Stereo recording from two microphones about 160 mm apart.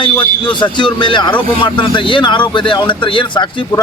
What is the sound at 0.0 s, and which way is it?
Speech, 30° left (ahead or behind).